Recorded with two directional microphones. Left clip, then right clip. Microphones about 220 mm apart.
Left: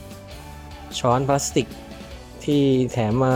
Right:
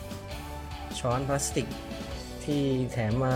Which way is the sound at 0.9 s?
20° left (ahead or behind).